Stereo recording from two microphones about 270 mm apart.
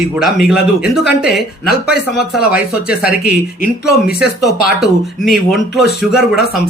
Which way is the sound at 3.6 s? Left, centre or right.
Left.